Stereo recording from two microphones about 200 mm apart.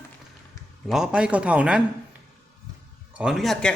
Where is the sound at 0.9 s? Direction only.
5° right (ahead or behind).